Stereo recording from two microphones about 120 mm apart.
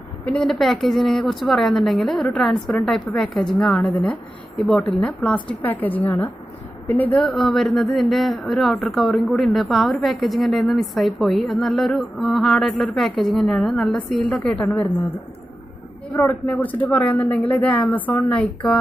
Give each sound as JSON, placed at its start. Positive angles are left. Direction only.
{"t": 0.2, "sound": "speech", "side_deg": 5}
{"t": 7.2, "sound": "speech", "side_deg": 0}
{"t": 16.1, "sound": "speech", "side_deg": 25}
{"t": 16.4, "sound": "speech", "side_deg": 10}